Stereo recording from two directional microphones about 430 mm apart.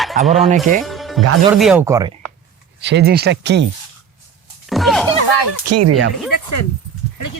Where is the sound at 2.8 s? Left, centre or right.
Right.